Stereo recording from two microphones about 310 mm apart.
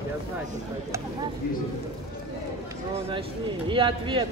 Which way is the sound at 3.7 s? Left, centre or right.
Centre.